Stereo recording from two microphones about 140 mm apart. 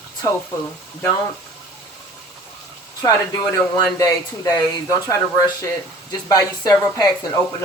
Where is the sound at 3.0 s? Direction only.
25° left (ahead or behind).